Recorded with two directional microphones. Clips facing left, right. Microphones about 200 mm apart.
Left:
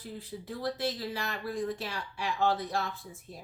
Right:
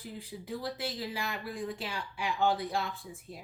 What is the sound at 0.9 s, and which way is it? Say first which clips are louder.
Speech: left 1 dB; 15° right (ahead or behind).